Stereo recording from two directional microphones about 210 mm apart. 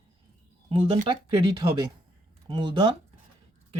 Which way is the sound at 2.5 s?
20° right (ahead or behind).